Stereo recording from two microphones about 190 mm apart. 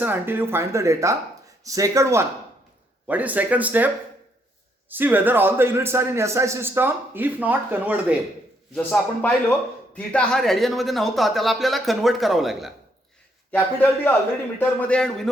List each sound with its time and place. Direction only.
0.0 s a man's voice: 10° right (ahead or behind)
8.7 s speech: 5° left (ahead or behind)
13.5 s a man's voice: 10° left (ahead or behind)